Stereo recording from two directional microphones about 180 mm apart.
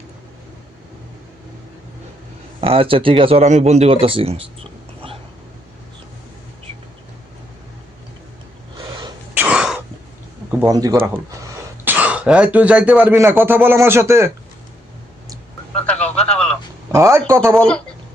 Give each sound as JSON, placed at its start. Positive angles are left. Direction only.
{"t": 2.6, "sound": "speech", "side_deg": -30}
{"t": 4.0, "sound": "a sound", "side_deg": -30}
{"t": 8.8, "sound": "sneeze", "side_deg": -25}
{"t": 9.3, "sound": "throat clearing", "side_deg": -10}
{"t": 10.7, "sound": "speech", "side_deg": -20}
{"t": 15.7, "sound": "radio", "side_deg": 5}
{"t": 16.9, "sound": "speech", "side_deg": -15}
{"t": 17.5, "sound": "speech", "side_deg": 5}